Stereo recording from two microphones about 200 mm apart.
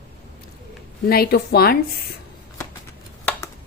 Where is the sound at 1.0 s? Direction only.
50° left (ahead or behind).